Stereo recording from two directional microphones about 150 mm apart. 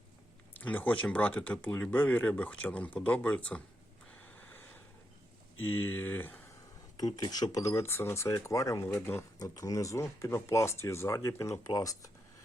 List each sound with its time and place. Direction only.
0.6 s speech: 10° left (ahead or behind)
5.5 s speech: 15° left (ahead or behind)
7.0 s speech: 25° left (ahead or behind)